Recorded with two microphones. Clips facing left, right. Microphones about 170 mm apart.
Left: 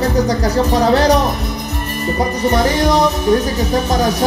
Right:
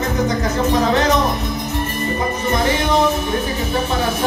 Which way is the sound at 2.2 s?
35° left (ahead or behind).